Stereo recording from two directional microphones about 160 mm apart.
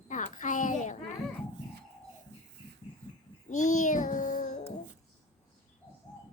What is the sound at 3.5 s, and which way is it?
Child singing, 50° left (ahead or behind).